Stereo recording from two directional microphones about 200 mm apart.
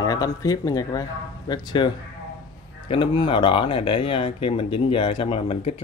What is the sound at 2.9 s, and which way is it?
Speech, 25° left (ahead or behind).